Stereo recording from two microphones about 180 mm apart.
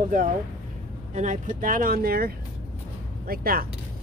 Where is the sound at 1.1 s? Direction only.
40° right (ahead or behind).